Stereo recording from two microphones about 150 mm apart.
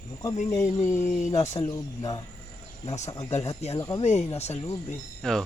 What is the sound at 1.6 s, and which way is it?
Speech, 25° left (ahead or behind).